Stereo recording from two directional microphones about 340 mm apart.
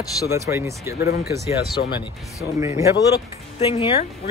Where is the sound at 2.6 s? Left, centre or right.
Centre.